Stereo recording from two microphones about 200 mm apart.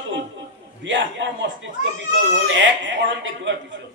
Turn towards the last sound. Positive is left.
turn(degrees=-65)  # may be behind; listen again after turning